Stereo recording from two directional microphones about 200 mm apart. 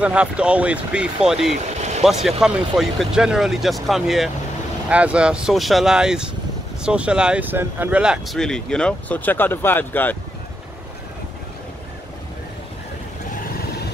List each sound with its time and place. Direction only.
0.0 s speech: 5° right (ahead or behind)
1.5 s vehicle: 35° right (ahead or behind)
2.2 s speech: centre (ahead or behind)